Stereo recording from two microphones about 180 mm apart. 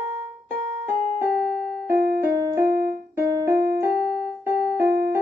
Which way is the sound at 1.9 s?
60° right (ahead or behind).